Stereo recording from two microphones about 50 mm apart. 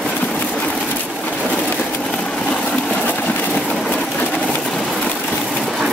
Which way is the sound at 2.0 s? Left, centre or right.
Centre.